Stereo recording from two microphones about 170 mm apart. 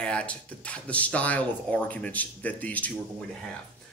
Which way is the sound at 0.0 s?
5° left (ahead or behind).